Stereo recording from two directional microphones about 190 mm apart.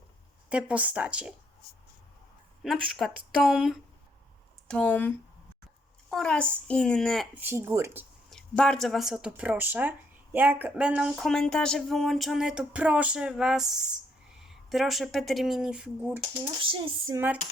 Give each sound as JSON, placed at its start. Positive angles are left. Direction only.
{"t": 0.5, "sound": "speech", "side_deg": -5}
{"t": 2.6, "sound": "speech", "side_deg": 0}
{"t": 7.3, "sound": "speech", "side_deg": -10}
{"t": 8.3, "sound": "speech", "side_deg": 5}
{"t": 16.6, "sound": "dishes", "side_deg": -25}